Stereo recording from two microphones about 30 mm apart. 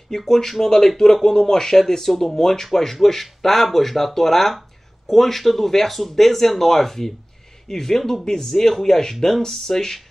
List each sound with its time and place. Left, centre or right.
0.1 s speech: centre